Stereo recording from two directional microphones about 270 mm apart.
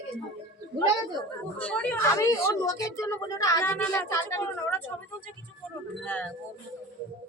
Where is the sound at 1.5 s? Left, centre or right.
Centre.